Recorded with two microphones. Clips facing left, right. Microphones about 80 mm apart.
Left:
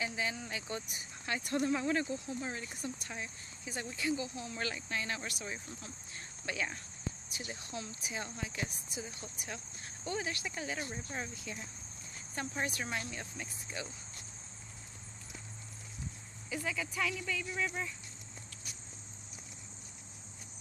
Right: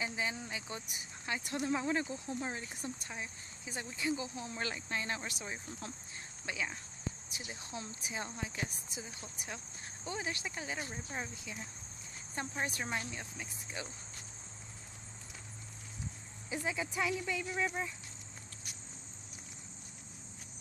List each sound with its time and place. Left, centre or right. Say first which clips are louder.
0.0 s speech: left 1 dB; right
6.4 s speech: left 1 dB; centre
7.3 s speech: left 2 dB; right
10.0 s speech: left 2 dB; right
12.4 s speech: even; right
12.8 s speech: even; centre
16.4 s speech: right 1 dB; right